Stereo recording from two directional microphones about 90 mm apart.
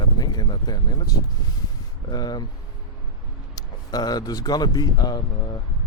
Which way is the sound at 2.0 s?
50° left (ahead or behind).